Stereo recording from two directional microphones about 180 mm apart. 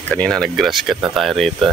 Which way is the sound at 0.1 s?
5° left (ahead or behind).